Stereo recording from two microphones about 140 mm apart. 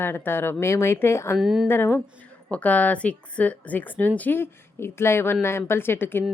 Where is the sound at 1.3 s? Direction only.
5° right (ahead or behind).